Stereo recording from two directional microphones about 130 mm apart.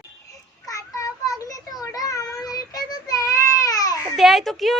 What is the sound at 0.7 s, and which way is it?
Child singing, 25° left (ahead or behind).